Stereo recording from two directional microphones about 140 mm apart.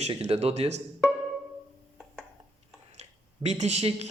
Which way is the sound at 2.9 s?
50° right (ahead or behind).